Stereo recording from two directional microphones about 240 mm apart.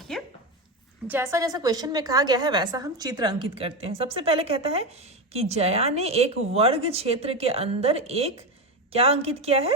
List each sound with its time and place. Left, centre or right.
1.0 s a woman's voice: centre